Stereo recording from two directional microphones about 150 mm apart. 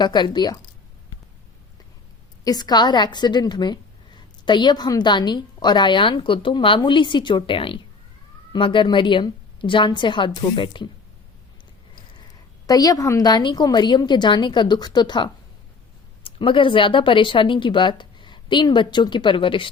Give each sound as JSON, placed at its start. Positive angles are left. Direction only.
{"t": 0.0, "sound": "a woman's voice", "side_deg": 30}
{"t": 2.4, "sound": "a woman's voice", "side_deg": 25}
{"t": 12.6, "sound": "a woman's voice", "side_deg": 25}